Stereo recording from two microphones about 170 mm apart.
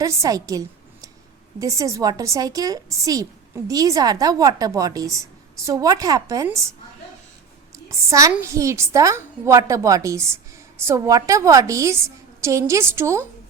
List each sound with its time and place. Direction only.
0.0 s a woman's voice: 20° right (ahead or behind)
7.9 s a woman's voice: 20° right (ahead or behind)